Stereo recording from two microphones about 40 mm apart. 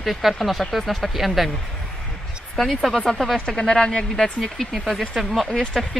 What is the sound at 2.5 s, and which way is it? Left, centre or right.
Speech, centre.